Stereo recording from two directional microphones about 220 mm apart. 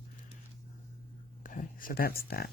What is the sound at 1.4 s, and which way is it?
Speech, 40° left (ahead or behind).